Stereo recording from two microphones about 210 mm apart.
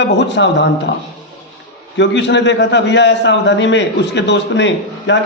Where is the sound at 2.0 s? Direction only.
55° left (ahead or behind).